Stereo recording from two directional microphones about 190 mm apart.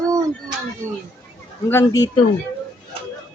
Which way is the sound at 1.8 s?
20° left (ahead or behind).